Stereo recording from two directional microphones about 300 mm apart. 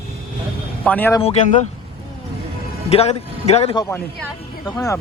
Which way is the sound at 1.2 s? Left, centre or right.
Left.